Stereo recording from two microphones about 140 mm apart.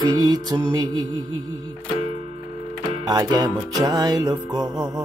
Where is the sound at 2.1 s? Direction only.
45° right (ahead or behind).